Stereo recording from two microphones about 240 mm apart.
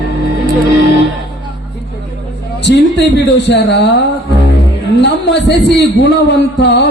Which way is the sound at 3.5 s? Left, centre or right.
Left.